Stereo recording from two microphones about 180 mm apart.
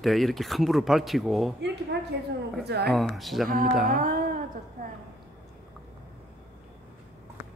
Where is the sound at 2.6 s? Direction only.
65° right (ahead or behind).